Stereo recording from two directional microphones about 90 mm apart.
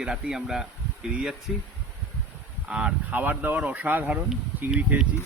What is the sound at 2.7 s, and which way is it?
Speech, 10° right (ahead or behind).